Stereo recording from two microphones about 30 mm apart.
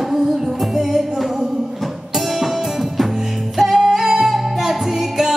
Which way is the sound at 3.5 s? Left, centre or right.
Centre.